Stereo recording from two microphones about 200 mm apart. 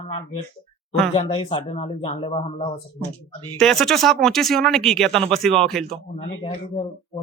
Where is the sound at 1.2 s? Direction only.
25° left (ahead or behind).